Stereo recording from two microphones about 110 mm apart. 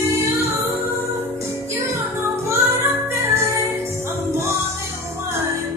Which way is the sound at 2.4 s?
20° right (ahead or behind).